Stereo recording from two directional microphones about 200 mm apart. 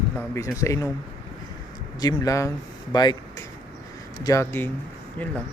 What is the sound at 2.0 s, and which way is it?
Speech, 15° left (ahead or behind).